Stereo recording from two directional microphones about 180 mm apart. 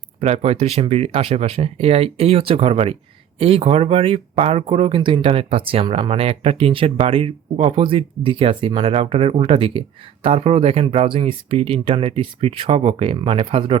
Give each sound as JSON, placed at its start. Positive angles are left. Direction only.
{"t": 0.2, "sound": "speech", "side_deg": -35}